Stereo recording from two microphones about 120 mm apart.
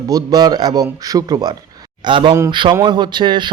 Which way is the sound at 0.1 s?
35° right (ahead or behind).